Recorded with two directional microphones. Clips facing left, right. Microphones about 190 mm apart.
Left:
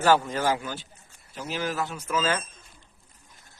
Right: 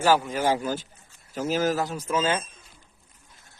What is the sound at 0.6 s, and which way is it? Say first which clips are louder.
Speech: right 7 dB; 40° right (ahead or behind).